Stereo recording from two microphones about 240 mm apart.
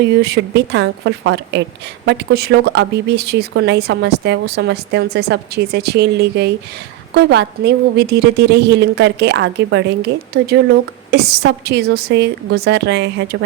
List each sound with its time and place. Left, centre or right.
0.2 s speech: right